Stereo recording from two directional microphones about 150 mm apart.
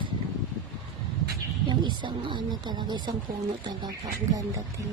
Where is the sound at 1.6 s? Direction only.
30° right (ahead or behind).